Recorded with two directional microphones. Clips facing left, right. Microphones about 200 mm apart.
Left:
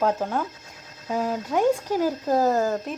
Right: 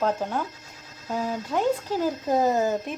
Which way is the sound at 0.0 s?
5° left (ahead or behind).